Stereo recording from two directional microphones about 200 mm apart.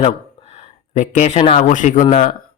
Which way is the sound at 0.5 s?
40° left (ahead or behind).